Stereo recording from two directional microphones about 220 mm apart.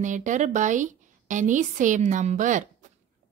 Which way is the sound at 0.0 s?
35° right (ahead or behind).